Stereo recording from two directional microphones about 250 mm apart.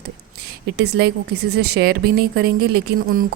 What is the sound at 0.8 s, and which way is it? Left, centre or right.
A woman's voice, right.